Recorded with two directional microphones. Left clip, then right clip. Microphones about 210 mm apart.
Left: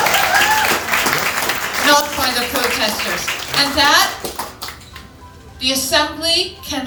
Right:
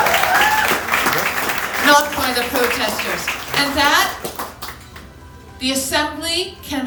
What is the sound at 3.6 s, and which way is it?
Speech, 20° right (ahead or behind).